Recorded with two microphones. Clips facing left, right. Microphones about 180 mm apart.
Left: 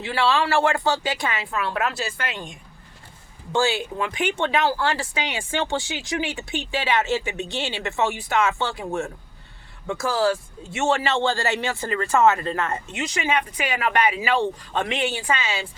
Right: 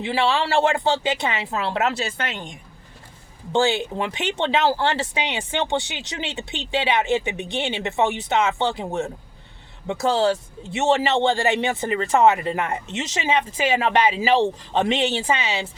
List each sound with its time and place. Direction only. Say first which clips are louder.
0.0 s speech: even; 20° right (ahead or behind)
3.5 s speech: right 2 dB; 20° right (ahead or behind)